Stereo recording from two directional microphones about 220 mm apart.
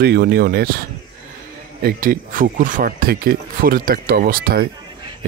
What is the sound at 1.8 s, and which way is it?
Speech, 40° right (ahead or behind).